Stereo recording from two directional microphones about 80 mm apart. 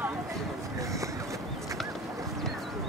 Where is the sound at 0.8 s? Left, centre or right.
Right.